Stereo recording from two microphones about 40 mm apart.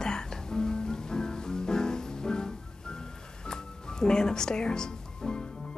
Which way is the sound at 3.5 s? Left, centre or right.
Centre.